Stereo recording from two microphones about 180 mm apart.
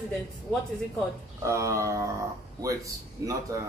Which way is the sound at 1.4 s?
15° right (ahead or behind).